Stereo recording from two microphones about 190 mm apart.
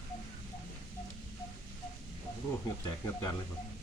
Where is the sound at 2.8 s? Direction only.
20° left (ahead or behind).